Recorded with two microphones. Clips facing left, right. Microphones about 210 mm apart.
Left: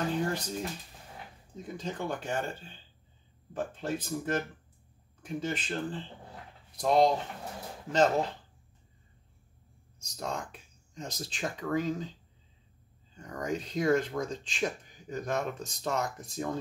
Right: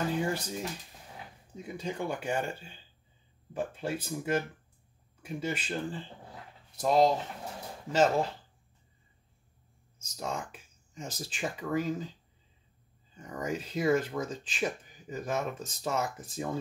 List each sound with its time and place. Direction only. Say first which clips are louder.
0.2 s speech: even; 10° right (ahead or behind)
10.1 s speech: even; 5° right (ahead or behind)
13.1 s speech: left 1 dB; 5° right (ahead or behind)